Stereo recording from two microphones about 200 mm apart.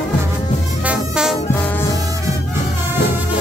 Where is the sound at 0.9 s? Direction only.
5° right (ahead or behind).